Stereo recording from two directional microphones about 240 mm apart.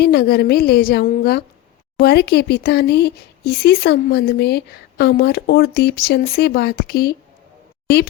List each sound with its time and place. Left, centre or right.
0.0 s speech: left